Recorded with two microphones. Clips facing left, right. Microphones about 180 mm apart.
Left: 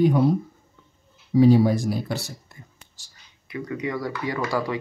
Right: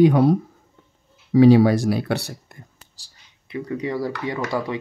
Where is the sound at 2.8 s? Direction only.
30° right (ahead or behind).